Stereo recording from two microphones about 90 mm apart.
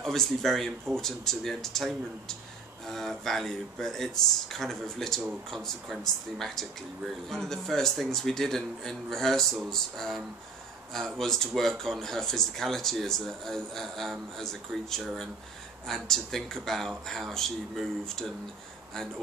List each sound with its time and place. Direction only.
0.0 s speech: 5° left (ahead or behind)